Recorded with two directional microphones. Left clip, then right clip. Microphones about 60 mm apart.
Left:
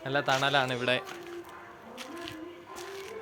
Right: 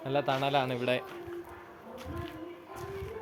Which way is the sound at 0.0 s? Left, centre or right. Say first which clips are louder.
Left 2 dB; centre.